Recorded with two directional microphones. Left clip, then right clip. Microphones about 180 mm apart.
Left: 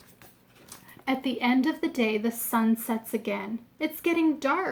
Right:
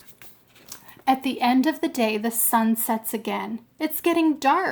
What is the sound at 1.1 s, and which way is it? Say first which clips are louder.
A woman's voice: right 6 dB; 55° right (ahead or behind).